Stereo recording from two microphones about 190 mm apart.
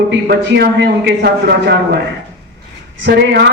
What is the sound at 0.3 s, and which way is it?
A man's voice, 60° right (ahead or behind).